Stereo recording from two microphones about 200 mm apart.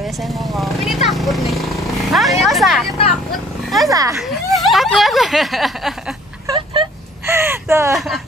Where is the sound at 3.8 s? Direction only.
15° right (ahead or behind).